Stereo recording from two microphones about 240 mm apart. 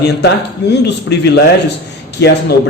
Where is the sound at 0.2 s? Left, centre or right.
Left.